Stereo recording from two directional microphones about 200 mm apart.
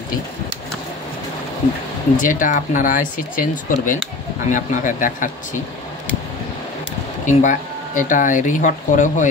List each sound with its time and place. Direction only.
2.1 s speech: 40° left (ahead or behind)
7.2 s speech: 40° left (ahead or behind)